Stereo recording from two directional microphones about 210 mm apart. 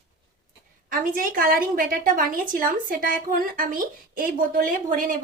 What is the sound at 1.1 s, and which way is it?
A woman's voice, 40° right (ahead or behind).